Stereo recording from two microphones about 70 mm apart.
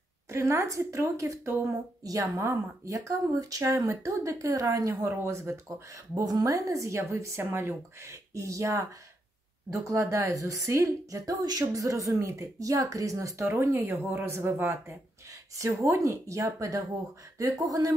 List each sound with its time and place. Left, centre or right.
0.3 s speech: right
2.3 s speech: right
6.1 s speech: right
15.6 s speech: right